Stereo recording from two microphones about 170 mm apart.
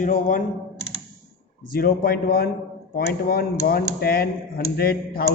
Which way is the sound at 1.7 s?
60° left (ahead or behind).